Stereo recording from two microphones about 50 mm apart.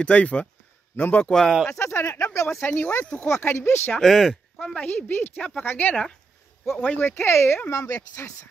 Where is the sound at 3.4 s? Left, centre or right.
Left.